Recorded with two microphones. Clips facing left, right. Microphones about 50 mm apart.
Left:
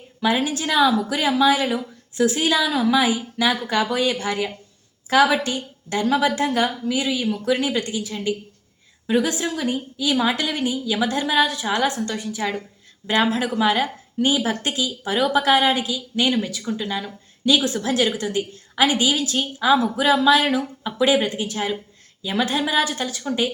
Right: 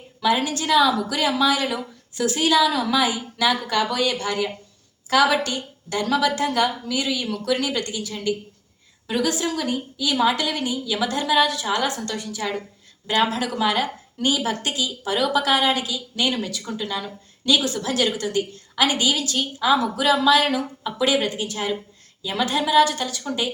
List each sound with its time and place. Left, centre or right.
0.2 s a woman's voice: left
21.5 s a woman's voice: centre
22.2 s a woman's voice: left